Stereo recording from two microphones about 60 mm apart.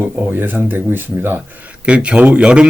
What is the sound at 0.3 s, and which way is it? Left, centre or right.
Speech, right.